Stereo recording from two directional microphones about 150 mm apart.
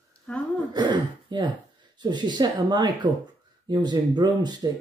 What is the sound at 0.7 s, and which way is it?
Speech, 30° right (ahead or behind).